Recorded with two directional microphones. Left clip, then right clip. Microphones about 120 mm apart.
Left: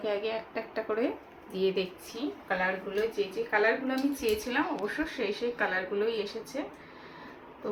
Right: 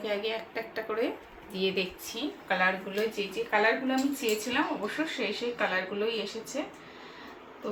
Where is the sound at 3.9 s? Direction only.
15° left (ahead or behind).